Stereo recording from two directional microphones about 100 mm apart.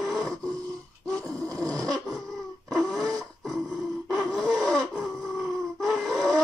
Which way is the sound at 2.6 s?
Centre (ahead or behind).